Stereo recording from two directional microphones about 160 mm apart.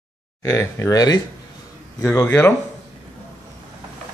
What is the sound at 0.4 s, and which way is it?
Speech, 15° left (ahead or behind).